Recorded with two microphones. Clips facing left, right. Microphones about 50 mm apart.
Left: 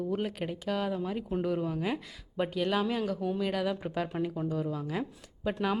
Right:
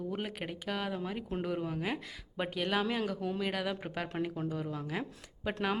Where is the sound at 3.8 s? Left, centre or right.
Right.